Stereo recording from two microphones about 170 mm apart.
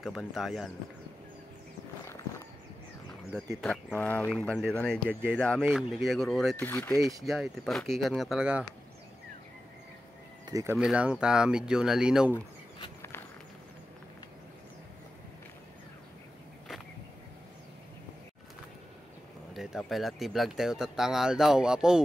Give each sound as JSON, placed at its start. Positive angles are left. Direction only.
{"t": 0.0, "sound": "speech", "side_deg": 0}
{"t": 3.6, "sound": "speech", "side_deg": 5}
{"t": 10.4, "sound": "speech", "side_deg": -20}
{"t": 10.8, "sound": "speech", "side_deg": -5}
{"t": 19.5, "sound": "speech", "side_deg": 0}